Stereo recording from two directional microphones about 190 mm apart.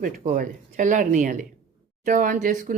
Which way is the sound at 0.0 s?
45° right (ahead or behind).